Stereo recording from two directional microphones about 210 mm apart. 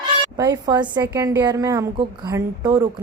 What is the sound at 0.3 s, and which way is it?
A woman's voice, 15° right (ahead or behind).